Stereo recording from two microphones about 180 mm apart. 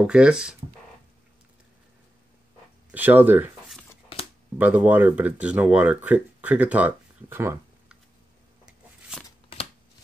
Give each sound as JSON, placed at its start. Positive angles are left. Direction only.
{"t": 0.0, "sound": "speech", "side_deg": -5}
{"t": 2.9, "sound": "speech", "side_deg": -10}
{"t": 4.1, "sound": "a sound", "side_deg": 30}
{"t": 4.6, "sound": "speech", "side_deg": -10}